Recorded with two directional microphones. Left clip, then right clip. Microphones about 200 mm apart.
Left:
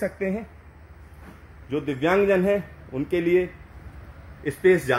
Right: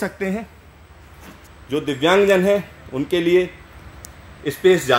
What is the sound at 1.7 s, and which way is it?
A man's voice, 10° right (ahead or behind).